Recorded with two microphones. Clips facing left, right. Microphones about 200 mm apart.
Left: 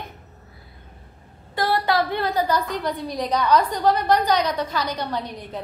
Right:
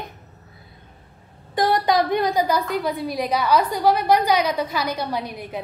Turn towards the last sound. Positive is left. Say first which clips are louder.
# right 1 dB
turn(degrees=-10)  # may be behind; listen again after turning